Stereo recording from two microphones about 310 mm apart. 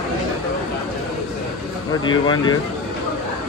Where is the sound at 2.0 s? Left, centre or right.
Centre.